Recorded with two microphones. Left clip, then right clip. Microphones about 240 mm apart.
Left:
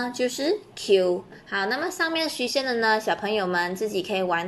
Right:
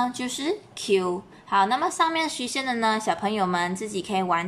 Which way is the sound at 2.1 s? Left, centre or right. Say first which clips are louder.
Left 2 dB; right.